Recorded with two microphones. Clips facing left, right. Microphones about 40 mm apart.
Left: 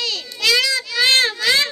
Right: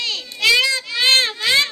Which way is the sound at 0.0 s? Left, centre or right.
Right.